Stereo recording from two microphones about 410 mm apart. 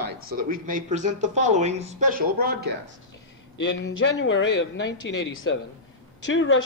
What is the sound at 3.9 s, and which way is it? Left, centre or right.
Speech, left.